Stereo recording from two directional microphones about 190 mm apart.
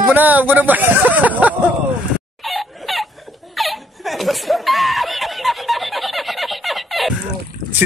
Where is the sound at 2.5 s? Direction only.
Centre (ahead or behind).